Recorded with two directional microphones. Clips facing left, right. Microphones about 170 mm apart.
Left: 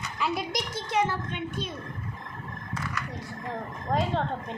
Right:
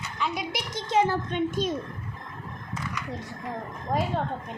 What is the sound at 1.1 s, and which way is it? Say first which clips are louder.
Speech: right 6 dB; 40° right (ahead or behind).